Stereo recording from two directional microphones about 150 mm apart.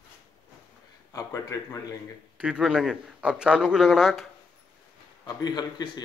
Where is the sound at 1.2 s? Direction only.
25° left (ahead or behind).